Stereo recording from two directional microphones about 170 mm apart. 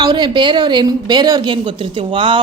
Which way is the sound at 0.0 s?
25° right (ahead or behind).